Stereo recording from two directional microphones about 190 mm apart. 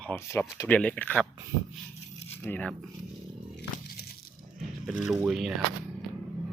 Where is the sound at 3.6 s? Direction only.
55° left (ahead or behind).